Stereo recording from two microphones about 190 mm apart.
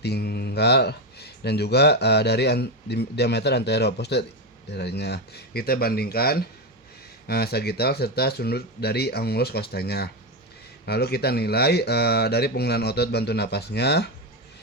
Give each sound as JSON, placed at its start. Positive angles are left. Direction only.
{"t": 0.0, "sound": "speech", "side_deg": 60}